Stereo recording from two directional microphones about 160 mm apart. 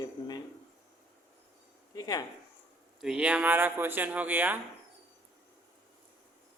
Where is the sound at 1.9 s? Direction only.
20° left (ahead or behind).